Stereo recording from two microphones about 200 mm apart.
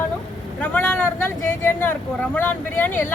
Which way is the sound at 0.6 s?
10° left (ahead or behind).